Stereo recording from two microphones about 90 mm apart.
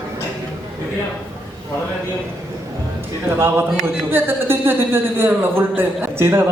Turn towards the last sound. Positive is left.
turn(degrees=-25)  # may be behind; listen again after turning